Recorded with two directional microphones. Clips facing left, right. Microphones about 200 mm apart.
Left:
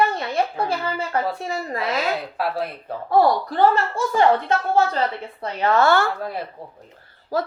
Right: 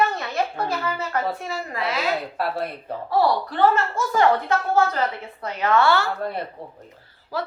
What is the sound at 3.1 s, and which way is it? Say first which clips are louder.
Speech: left 3 dB; 50° left (ahead or behind).